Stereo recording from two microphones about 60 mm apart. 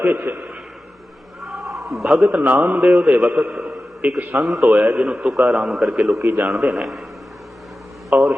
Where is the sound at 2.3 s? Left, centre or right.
Right.